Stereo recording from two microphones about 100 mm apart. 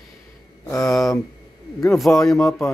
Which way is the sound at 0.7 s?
Centre (ahead or behind).